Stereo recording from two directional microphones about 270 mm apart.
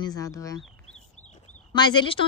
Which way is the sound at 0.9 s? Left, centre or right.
Left.